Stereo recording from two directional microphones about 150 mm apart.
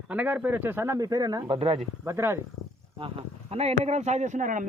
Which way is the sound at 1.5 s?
40° right (ahead or behind).